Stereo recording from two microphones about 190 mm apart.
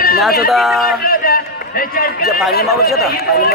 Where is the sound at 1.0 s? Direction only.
50° left (ahead or behind).